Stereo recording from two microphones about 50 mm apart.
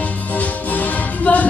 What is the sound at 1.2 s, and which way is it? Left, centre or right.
Music, left.